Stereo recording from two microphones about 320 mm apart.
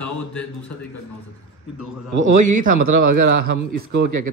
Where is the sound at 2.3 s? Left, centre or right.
Right.